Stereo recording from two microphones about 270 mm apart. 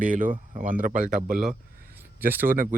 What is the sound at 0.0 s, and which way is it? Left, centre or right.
Speech, right.